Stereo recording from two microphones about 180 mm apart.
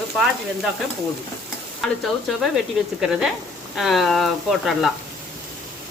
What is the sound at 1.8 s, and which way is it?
Stir, centre (ahead or behind).